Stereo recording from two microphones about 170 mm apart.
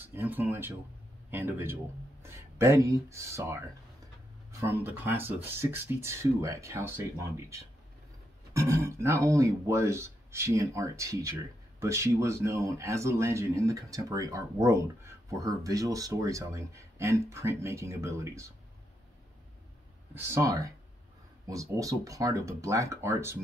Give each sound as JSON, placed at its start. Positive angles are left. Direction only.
{"t": 0.0, "sound": "speech", "side_deg": -10}
{"t": 20.2, "sound": "speech", "side_deg": -15}